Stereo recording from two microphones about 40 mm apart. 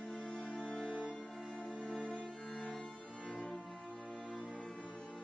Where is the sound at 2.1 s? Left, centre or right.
Left.